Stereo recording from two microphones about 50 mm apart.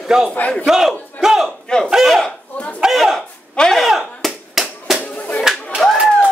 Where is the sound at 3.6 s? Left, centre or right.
Centre.